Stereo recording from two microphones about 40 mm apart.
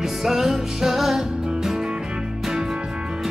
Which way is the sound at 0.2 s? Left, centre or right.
Centre.